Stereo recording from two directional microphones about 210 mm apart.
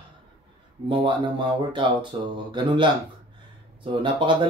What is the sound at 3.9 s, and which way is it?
Speech, 25° right (ahead or behind).